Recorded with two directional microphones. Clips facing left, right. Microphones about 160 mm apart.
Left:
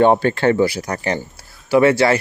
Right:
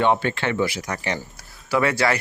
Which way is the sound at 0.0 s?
40° left (ahead or behind).